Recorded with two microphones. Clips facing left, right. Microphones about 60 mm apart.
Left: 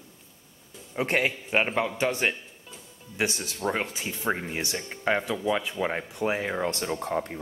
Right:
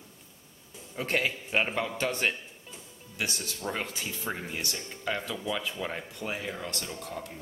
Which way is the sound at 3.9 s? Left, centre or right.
Centre.